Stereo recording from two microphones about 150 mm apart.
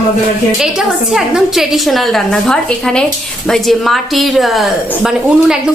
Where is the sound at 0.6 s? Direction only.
5° right (ahead or behind).